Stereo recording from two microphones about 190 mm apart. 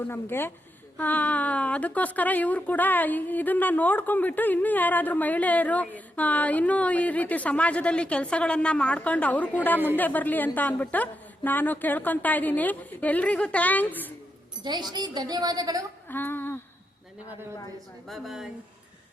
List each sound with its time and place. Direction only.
0.1 s a woman's voice: 10° left (ahead or behind)
14.6 s a woman's voice: 25° right (ahead or behind)
16.0 s a sound: 10° left (ahead or behind)
18.1 s speech: centre (ahead or behind)